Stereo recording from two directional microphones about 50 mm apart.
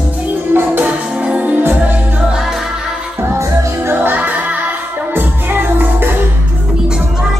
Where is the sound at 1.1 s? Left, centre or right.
Right.